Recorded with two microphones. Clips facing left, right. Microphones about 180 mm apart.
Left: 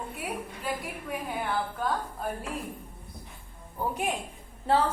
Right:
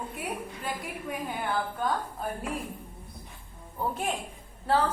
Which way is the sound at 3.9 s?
15° left (ahead or behind).